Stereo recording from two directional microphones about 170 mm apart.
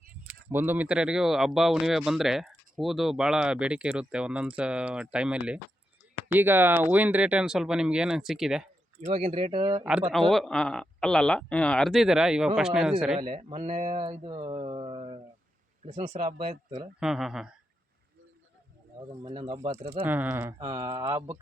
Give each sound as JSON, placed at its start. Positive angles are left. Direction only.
{"t": 0.5, "sound": "speech", "side_deg": -10}
{"t": 9.0, "sound": "speech", "side_deg": -40}
{"t": 10.1, "sound": "speech", "side_deg": 0}
{"t": 13.1, "sound": "speech", "side_deg": -40}
{"t": 14.0, "sound": "speech", "side_deg": -30}
{"t": 14.5, "sound": "a sound", "side_deg": -35}
{"t": 15.9, "sound": "speech", "side_deg": -35}
{"t": 17.0, "sound": "speech", "side_deg": -5}
{"t": 19.5, "sound": "speech", "side_deg": -40}
{"t": 19.9, "sound": "speech", "side_deg": -10}